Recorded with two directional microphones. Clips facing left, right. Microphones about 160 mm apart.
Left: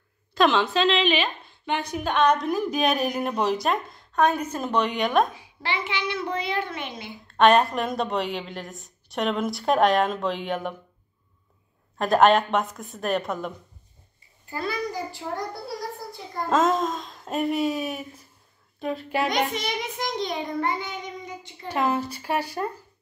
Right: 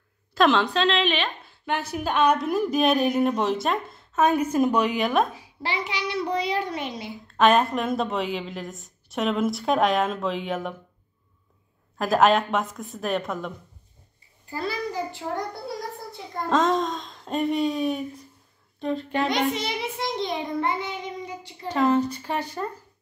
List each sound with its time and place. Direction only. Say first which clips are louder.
0.3 s a woman's voice: right 1 dB; centre (ahead or behind)
5.3 s a child's voice: even; 40° right (ahead or behind)
7.3 s a woman's voice: left 1 dB; centre (ahead or behind)
12.0 s a woman's voice: left 1 dB; centre (ahead or behind)
14.5 s a child's voice: even; 30° right (ahead or behind)
16.4 s a woman's voice: even; 5° left (ahead or behind)
19.2 s a child's voice: right 1 dB; 30° right (ahead or behind)
21.6 s speech: right 4 dB; 10° left (ahead or behind)